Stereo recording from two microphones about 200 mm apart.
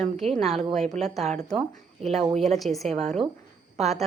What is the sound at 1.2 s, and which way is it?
Speech, 35° right (ahead or behind).